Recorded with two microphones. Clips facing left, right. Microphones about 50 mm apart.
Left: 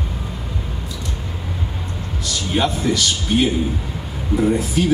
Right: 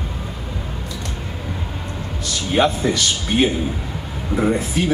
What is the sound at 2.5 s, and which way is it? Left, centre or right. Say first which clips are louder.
Speech: right 2 dB; right.